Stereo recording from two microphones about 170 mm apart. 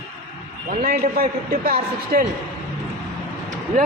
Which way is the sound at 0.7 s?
55° right (ahead or behind).